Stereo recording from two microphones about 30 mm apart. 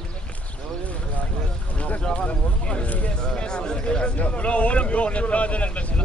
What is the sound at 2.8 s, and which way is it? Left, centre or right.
Speech, left.